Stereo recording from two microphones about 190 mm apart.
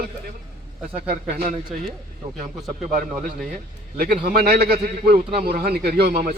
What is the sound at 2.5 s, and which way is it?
Speech, centre (ahead or behind).